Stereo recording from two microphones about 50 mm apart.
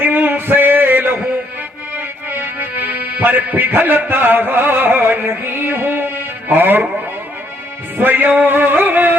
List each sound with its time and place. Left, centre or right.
0.0 s a sound: right
2.3 s music: right
7.9 s music: right